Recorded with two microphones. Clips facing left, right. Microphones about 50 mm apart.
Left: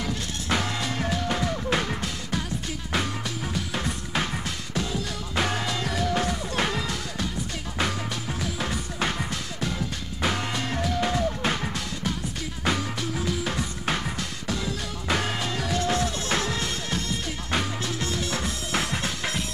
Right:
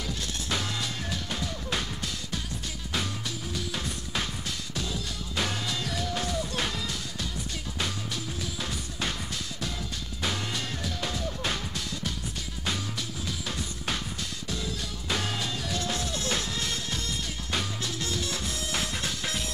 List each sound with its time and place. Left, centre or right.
0.0 s music: left
3.5 s music: left
8.4 s music: left
12.6 s music: left
14.5 s music: left
15.1 s music: left